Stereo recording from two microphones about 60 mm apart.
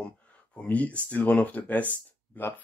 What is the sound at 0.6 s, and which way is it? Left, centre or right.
Speech, left.